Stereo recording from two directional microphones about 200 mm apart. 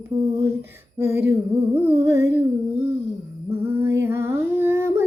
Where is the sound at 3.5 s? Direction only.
10° right (ahead or behind).